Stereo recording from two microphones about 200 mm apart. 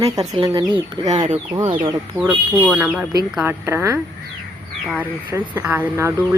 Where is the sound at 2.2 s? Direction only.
10° right (ahead or behind).